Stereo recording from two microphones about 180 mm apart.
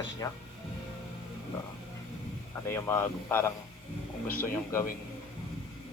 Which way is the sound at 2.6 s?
15° left (ahead or behind).